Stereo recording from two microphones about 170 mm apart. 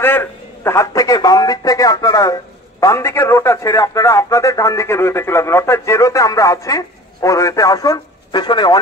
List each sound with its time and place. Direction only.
0.0 s a man's voice: 15° left (ahead or behind)